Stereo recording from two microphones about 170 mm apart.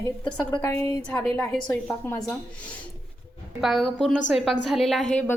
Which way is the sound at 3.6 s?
Centre (ahead or behind).